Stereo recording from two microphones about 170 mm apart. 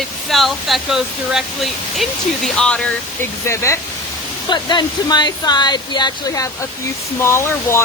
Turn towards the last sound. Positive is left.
turn(degrees=15)  # may be behind; listen again after turning